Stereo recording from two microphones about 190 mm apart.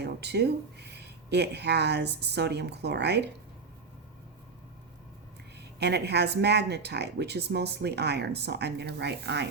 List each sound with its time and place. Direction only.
0.0 s speech: 60° right (ahead or behind)
5.8 s speech: 60° right (ahead or behind)